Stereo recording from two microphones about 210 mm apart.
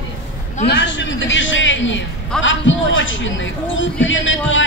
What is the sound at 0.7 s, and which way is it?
A man's voice, 60° left (ahead or behind).